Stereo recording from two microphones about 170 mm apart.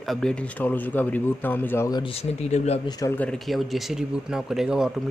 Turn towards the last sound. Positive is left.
turn(degrees=-5)  # may be behind; listen again after turning